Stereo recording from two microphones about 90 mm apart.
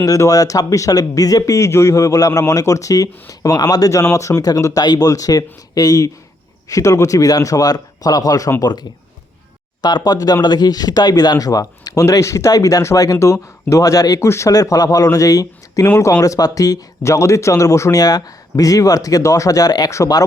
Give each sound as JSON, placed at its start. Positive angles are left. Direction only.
{"t": 0.0, "sound": "speech", "side_deg": 40}
{"t": 8.6, "sound": "speech", "side_deg": 50}